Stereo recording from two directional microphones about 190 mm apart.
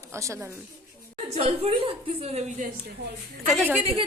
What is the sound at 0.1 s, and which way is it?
Speech, 15° right (ahead or behind).